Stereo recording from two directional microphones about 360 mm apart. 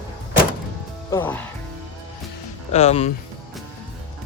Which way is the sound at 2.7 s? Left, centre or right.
Centre.